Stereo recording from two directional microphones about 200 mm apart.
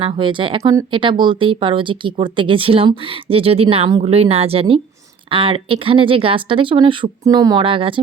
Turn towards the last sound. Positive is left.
turn(degrees=-25)  # may be behind; listen again after turning